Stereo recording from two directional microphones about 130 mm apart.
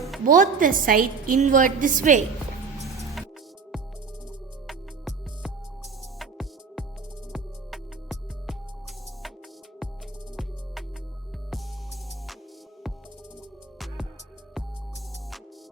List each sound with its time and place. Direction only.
0.3 s a woman's voice: 90° right
4.6 s music: centre (ahead or behind)
13.7 s music: centre (ahead or behind)